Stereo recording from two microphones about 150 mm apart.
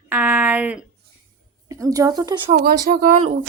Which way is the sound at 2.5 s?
75° right (ahead or behind).